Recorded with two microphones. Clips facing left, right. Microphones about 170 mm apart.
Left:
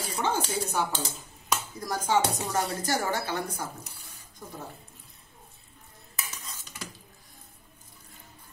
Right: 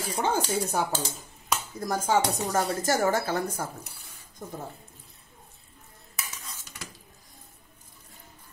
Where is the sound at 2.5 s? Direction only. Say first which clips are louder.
Right 5 dB; 45° right (ahead or behind).